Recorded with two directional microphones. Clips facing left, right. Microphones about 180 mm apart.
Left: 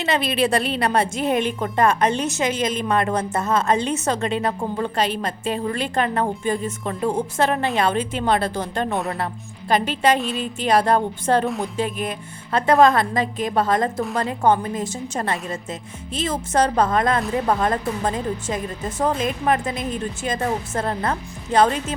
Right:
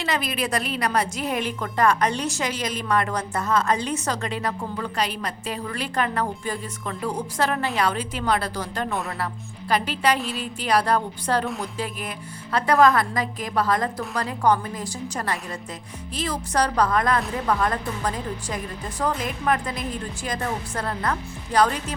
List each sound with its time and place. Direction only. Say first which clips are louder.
0.0 s a woman's voice: left 5 dB; 25° left (ahead or behind)